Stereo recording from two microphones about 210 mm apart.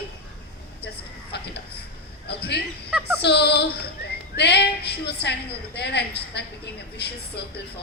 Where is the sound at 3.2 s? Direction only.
50° left (ahead or behind).